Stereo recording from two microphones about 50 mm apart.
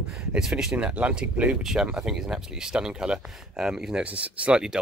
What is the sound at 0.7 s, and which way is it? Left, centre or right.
Speech, right.